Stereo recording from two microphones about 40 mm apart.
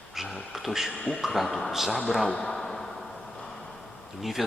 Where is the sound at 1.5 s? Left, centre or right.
Centre.